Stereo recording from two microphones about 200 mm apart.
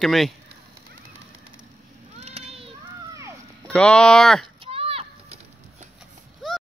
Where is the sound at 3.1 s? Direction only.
15° right (ahead or behind).